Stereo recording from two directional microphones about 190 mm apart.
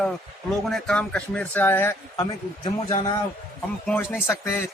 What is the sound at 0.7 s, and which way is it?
Speech, 5° left (ahead or behind).